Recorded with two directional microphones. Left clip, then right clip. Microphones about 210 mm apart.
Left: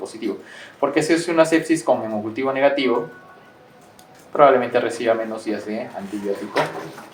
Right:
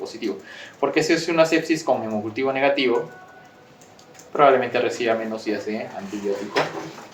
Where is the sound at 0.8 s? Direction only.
5° left (ahead or behind).